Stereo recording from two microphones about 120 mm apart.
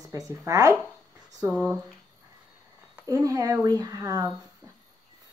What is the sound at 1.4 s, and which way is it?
Speech, 10° right (ahead or behind).